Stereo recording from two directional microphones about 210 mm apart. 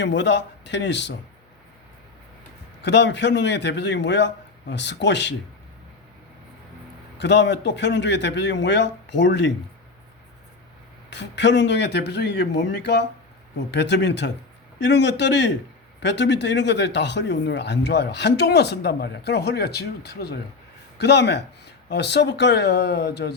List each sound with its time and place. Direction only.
0.0 s a man's voice: 60° left (ahead or behind)
2.8 s a man's voice: 55° left (ahead or behind)
7.2 s a man's voice: 55° left (ahead or behind)
11.1 s a man's voice: 55° left (ahead or behind)